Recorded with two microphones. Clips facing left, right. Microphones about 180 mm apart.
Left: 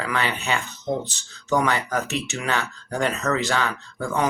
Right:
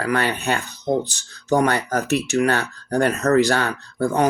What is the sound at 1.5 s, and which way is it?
Speech, 45° right (ahead or behind).